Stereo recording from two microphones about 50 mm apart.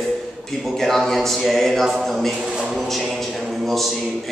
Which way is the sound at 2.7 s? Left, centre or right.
Centre.